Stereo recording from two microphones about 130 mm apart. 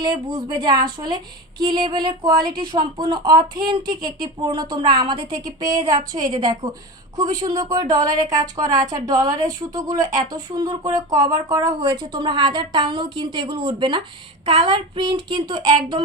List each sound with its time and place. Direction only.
0.0 s a woman's voice: 35° right (ahead or behind)